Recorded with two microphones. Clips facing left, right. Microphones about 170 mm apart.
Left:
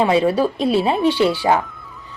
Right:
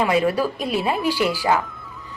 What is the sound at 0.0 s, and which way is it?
Speech, 30° left (ahead or behind).